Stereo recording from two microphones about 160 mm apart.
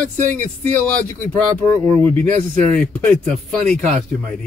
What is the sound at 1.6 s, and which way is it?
Speech, 10° left (ahead or behind).